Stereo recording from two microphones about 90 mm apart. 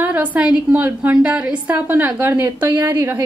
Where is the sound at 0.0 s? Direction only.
15° right (ahead or behind).